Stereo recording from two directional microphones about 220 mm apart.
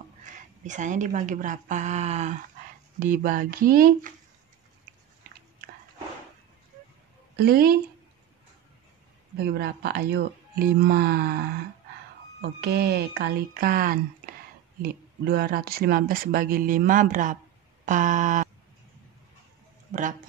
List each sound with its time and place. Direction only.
0.2 s speech: 35° right (ahead or behind)
7.3 s speech: 45° right (ahead or behind)
9.4 s speech: 45° right (ahead or behind)
19.9 s speech: 35° right (ahead or behind)